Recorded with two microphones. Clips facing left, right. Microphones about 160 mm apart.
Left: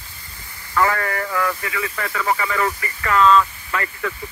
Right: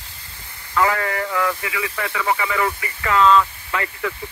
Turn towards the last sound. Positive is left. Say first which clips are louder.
# even
turn(degrees=-10)  # may be behind; listen again after turning